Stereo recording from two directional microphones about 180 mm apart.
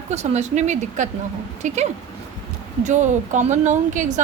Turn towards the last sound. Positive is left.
turn(degrees=-45)  # may be behind; listen again after turning